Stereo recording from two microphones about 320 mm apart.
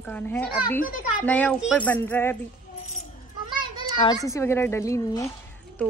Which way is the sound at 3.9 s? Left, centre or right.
Centre.